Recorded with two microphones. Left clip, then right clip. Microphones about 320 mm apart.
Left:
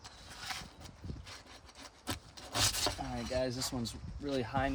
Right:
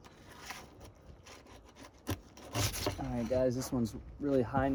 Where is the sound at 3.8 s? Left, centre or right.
Left.